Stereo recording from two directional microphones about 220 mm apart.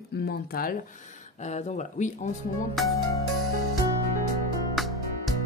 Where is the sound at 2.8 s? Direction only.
Centre (ahead or behind).